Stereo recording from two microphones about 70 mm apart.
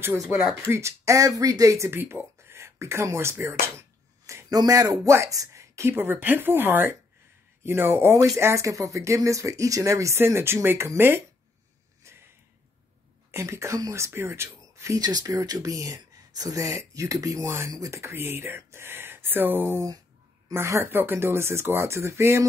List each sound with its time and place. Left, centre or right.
0.3 s speech: centre
0.7 s speech: right
1.9 s speech: right
4.5 s speech: right
5.0 s speech: right
12.1 s a sound: right
13.3 s speech: right
15.0 s speech: right
17.5 s speech: right